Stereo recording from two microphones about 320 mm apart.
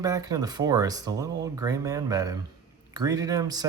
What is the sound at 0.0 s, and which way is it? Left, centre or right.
Speech, centre.